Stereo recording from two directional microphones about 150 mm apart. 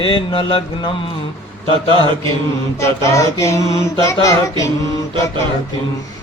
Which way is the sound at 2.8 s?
20° left (ahead or behind).